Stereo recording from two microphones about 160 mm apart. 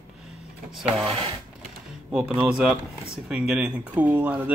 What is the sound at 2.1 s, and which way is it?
Speech, 5° right (ahead or behind).